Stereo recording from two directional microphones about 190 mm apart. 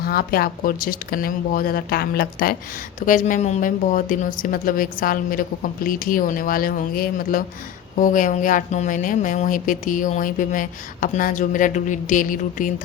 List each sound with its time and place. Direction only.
0.0 s speech: 50° left (ahead or behind)